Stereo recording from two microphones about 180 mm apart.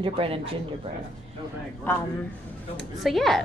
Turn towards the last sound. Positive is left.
turn(degrees=0)  # may be behind; listen again after turning